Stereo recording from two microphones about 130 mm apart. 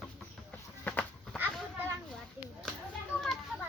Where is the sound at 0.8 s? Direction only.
10° left (ahead or behind).